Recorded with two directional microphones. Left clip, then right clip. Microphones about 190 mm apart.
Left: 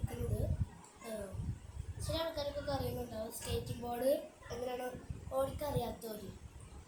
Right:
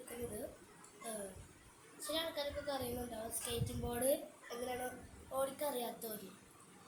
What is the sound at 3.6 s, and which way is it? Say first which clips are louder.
A woman's voice: left 3 dB; 15° right (ahead or behind).